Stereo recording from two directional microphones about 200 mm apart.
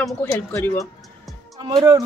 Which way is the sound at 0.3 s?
15° left (ahead or behind).